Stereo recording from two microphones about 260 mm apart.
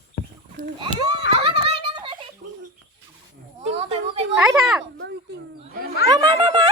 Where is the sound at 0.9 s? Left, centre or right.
Left.